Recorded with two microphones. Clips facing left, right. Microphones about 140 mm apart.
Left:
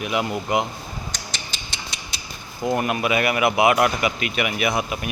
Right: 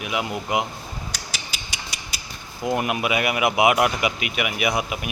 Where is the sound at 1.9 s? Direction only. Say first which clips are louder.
Left 1 dB; 10° right (ahead or behind).